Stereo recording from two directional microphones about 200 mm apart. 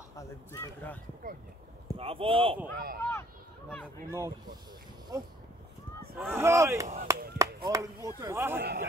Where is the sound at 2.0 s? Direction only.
30° right (ahead or behind).